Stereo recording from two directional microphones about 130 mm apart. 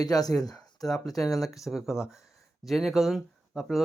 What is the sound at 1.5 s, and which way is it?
Speech, centre (ahead or behind).